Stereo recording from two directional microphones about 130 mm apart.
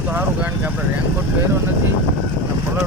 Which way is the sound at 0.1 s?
15° right (ahead or behind).